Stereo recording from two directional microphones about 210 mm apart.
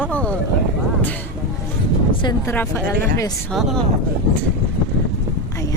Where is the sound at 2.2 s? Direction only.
10° left (ahead or behind).